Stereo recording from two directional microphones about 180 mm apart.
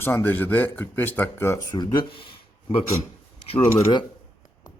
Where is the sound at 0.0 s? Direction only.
10° left (ahead or behind); by 2.8 s 30° left (ahead or behind).